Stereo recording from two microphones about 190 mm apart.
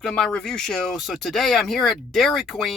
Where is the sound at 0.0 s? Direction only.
5° left (ahead or behind).